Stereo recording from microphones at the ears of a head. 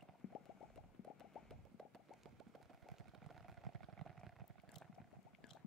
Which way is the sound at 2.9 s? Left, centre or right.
Right.